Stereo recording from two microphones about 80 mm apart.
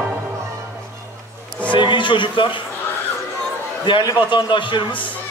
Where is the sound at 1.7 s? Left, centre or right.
Left.